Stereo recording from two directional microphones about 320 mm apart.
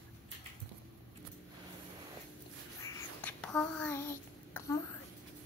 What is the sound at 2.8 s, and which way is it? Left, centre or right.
Child singing, centre.